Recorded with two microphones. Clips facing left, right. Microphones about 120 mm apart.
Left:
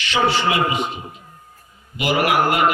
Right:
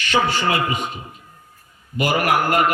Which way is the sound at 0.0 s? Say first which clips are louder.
Left 1 dB; 45° right (ahead or behind).